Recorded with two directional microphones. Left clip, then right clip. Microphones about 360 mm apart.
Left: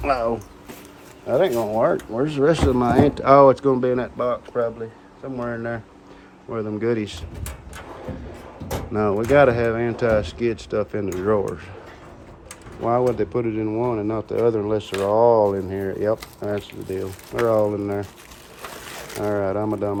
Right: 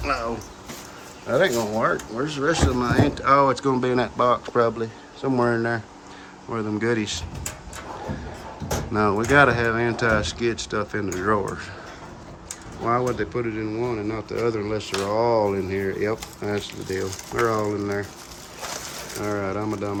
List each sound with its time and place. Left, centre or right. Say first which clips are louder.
0.0 s speech: left 4 dB; centre
8.9 s speech: left 1 dB; centre
12.8 s speech: left 3 dB; centre
19.2 s speech: left 4 dB; centre